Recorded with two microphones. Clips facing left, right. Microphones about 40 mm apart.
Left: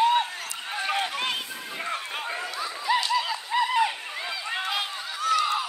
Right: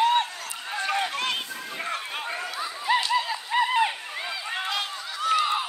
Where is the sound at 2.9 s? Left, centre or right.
Right.